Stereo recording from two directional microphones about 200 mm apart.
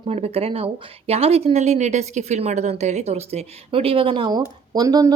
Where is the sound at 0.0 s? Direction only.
30° right (ahead or behind).